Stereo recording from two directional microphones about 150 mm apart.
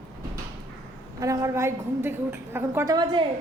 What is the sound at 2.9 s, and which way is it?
Speech, 35° right (ahead or behind).